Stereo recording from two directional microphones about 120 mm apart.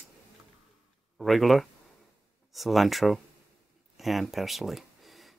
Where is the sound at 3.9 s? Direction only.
Centre (ahead or behind).